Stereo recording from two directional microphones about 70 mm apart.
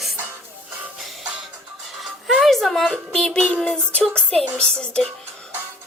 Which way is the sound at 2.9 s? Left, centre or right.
Centre.